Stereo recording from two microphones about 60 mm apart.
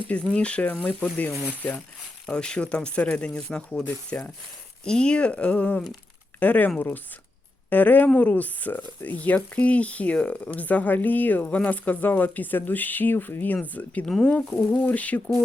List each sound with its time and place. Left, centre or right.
0.1 s speech: centre
2.3 s speech: centre
4.1 s speech: left
4.9 s speech: centre
6.7 s a sound: left
7.7 s speech: left
14.0 s speech: centre
14.5 s a sound: left
14.8 s speech: left